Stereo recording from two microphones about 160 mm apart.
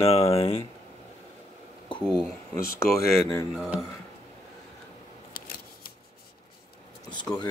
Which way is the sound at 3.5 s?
5° right (ahead or behind).